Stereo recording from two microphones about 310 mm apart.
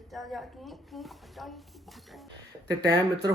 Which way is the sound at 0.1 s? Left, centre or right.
Centre.